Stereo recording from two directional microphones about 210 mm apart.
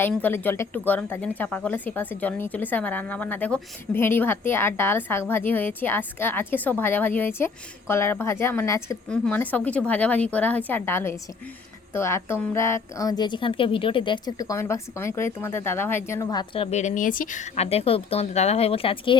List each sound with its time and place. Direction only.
0.0 s speech: 10° left (ahead or behind)
16.7 s speech: 35° left (ahead or behind)